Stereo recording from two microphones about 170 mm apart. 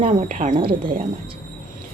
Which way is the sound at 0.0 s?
40° right (ahead or behind).